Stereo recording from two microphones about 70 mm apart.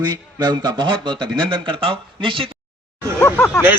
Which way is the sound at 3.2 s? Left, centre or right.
Left.